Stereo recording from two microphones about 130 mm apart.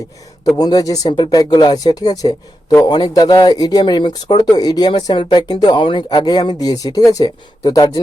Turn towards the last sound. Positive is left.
turn(degrees=30)  # may be behind; listen again after turning